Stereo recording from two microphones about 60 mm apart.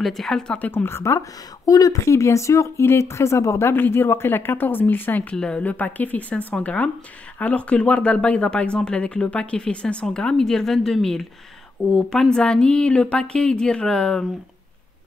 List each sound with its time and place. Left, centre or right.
0.0 s a woman's voice: centre
0.6 s speech: left
0.8 s speech: left
1.7 s speech: left
3.7 s speech: left
5.3 s a woman's voice: centre
5.6 s a woman's voice: left